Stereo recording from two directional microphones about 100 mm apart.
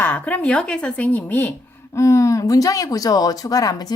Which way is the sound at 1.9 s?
30° left (ahead or behind).